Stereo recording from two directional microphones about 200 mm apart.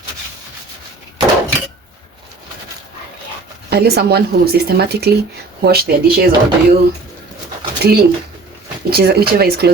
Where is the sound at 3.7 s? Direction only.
55° right (ahead or behind).